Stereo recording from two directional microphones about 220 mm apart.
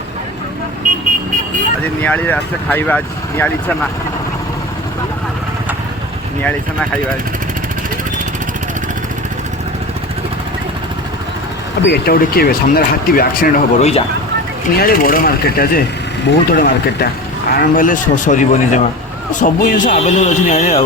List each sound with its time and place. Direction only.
2.0 s speech: 10° left (ahead or behind)
6.4 s speech: 5° left (ahead or behind)
11.9 s a man's voice: 45° left (ahead or behind)